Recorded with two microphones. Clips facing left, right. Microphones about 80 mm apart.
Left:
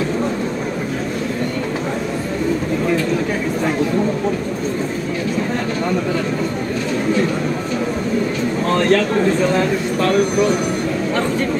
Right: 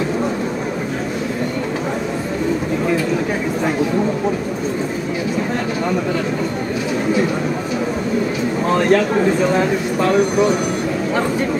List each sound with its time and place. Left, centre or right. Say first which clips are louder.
8.6 s speech: right 1 dB; centre